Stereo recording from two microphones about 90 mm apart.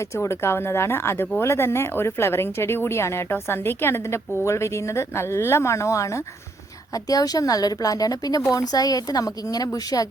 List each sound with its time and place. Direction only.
0.0 s a woman's voice: 30° left (ahead or behind)